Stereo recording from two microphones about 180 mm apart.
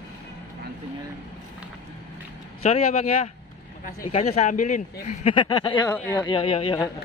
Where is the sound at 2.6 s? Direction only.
35° left (ahead or behind).